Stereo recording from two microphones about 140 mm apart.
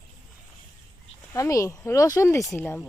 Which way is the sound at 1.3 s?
20° left (ahead or behind).